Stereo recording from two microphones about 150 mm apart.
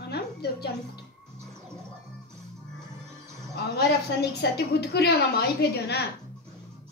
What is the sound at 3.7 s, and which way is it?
A woman's voice, 90° left.